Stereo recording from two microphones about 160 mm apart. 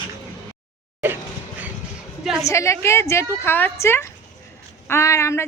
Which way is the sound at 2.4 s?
20° left (ahead or behind).